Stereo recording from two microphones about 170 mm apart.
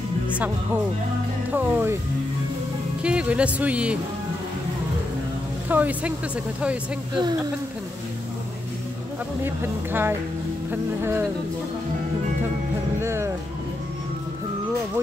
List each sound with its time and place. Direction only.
1.5 s speech: 10° right (ahead or behind)
3.0 s speech: 5° right (ahead or behind)
5.7 s speech: 10° right (ahead or behind)
9.4 s speech: 15° right (ahead or behind)
13.0 s speech: 15° right (ahead or behind)